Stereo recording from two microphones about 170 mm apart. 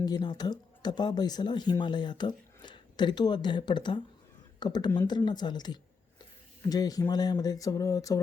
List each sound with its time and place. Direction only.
0.0 s speech: 25° left (ahead or behind)